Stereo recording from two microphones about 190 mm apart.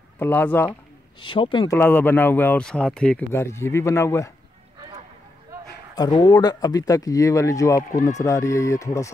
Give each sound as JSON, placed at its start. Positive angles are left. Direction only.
{"t": 0.2, "sound": "speech", "side_deg": 10}
{"t": 1.2, "sound": "speech", "side_deg": 25}
{"t": 1.8, "sound": "speech", "side_deg": 10}
{"t": 5.9, "sound": "speech", "side_deg": 20}